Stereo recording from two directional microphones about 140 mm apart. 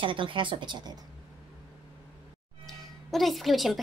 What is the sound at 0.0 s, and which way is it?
Speech, 35° right (ahead or behind).